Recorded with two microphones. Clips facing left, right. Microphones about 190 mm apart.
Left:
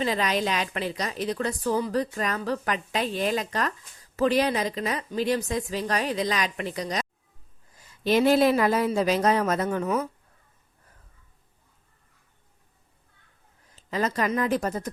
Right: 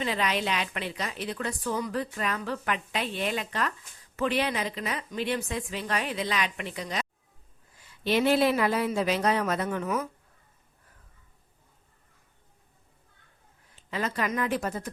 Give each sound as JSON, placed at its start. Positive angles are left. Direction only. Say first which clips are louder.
{"t": 0.0, "sound": "a woman's voice", "louder": "left 3 dB", "side_deg": 40}
{"t": 13.7, "sound": "a woman's voice", "louder": "left 4 dB", "side_deg": 40}